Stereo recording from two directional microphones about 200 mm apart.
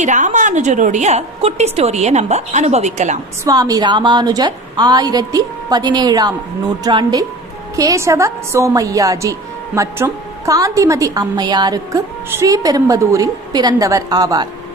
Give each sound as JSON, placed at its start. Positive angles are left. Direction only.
{"t": 0.0, "sound": "a woman's voice", "side_deg": -35}
{"t": 3.4, "sound": "a woman's voice", "side_deg": -20}